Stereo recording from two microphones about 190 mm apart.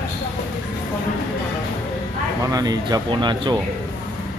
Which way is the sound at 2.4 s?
20° right (ahead or behind).